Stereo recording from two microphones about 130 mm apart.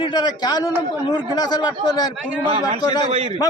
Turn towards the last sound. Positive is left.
turn(degrees=35)  # may be behind; listen again after turning